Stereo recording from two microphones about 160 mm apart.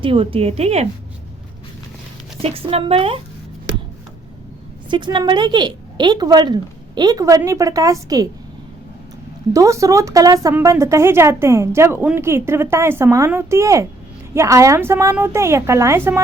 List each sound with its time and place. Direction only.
0.0 s a woman's voice: 35° right (ahead or behind)
2.4 s a woman's voice: 35° right (ahead or behind)
4.9 s a woman's voice: 30° right (ahead or behind)
9.5 s speech: 20° right (ahead or behind)